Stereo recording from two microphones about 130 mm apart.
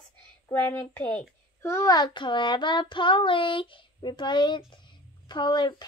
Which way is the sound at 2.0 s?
35° left (ahead or behind).